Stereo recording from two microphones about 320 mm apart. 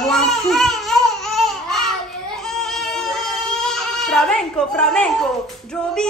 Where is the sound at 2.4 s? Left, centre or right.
Centre.